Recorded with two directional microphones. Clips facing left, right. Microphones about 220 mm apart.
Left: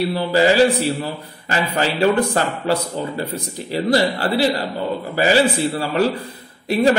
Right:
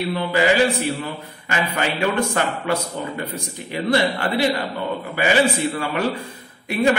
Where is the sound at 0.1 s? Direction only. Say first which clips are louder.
Left 1 dB; 35° left (ahead or behind).